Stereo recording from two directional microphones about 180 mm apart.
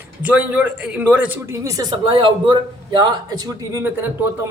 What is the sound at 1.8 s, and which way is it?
A man's voice, 25° right (ahead or behind).